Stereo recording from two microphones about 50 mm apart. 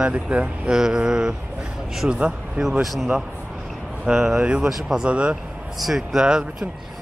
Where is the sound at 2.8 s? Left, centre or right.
Centre.